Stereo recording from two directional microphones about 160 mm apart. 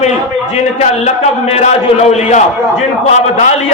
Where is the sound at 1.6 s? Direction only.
45° left (ahead or behind).